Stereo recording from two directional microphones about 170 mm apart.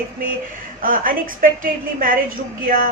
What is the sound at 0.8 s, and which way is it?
A woman's voice, 55° right (ahead or behind).